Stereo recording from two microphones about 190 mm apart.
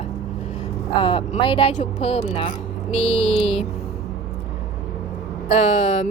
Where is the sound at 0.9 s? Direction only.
30° left (ahead or behind).